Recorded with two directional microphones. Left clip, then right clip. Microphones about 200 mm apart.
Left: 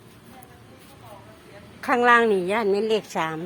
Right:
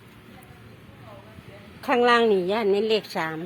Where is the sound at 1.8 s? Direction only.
Centre (ahead or behind).